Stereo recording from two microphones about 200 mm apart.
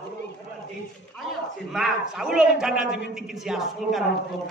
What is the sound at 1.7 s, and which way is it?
A man's voice, centre (ahead or behind).